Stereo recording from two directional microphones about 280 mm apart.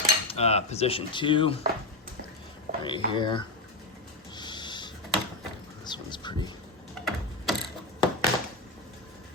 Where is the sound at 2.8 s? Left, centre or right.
Centre.